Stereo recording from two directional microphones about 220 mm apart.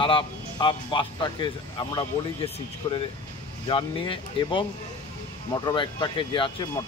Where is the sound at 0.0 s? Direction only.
20° left (ahead or behind).